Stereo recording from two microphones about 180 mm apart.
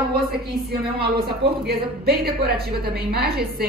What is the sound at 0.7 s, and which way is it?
A woman's voice, 60° right (ahead or behind).